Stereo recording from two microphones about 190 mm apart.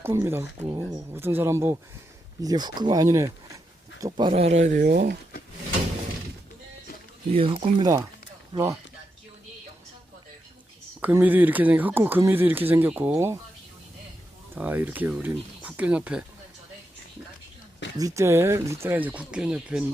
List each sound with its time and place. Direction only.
0.0 s speech: 15° right (ahead or behind)
4.3 s speech: 35° right (ahead or behind)
4.8 s speech: 55° right (ahead or behind)
7.3 s speech: 30° right (ahead or behind)
11.0 s speech: 10° right (ahead or behind)
14.5 s speech: 10° right (ahead or behind)
17.9 s speech: 15° right (ahead or behind)